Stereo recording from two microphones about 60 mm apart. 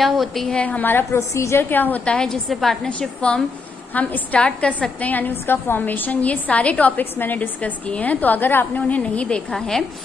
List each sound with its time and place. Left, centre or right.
0.0 s a woman's voice: centre
0.6 s a woman's voice: left
1.3 s a woman's voice: left
1.6 s a woman's voice: left
2.0 s a woman's voice: centre
3.0 s a woman's voice: centre; by 8.8 s left
8.8 s a woman's voice: left
9.5 s a woman's voice: centre